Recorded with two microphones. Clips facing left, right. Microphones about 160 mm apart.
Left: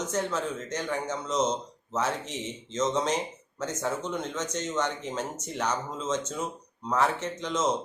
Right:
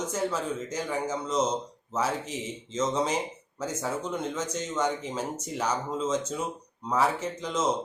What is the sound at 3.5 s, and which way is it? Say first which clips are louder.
Speech: even; 5° right (ahead or behind).